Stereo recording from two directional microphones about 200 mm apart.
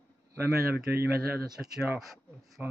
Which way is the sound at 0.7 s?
50° right (ahead or behind).